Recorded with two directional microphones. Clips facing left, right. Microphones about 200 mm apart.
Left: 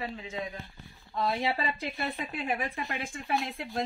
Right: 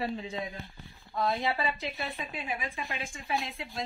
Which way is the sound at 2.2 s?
65° left (ahead or behind).